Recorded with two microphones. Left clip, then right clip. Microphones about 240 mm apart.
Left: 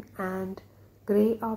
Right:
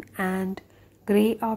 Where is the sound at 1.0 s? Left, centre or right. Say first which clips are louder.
Right 2 dB; right.